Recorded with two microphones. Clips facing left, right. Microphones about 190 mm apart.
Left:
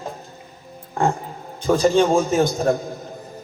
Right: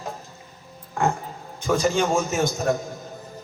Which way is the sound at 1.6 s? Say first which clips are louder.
Left 5 dB; 30° left (ahead or behind).